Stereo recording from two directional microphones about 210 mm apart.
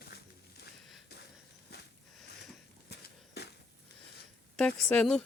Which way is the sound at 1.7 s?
50° left (ahead or behind).